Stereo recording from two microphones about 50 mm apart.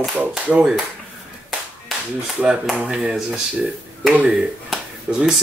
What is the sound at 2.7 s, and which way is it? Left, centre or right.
Speech, centre.